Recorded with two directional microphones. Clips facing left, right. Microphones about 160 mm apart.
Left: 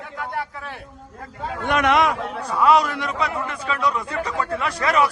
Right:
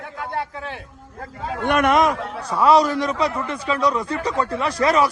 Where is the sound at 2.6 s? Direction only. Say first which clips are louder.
Right 2 dB; 35° right (ahead or behind).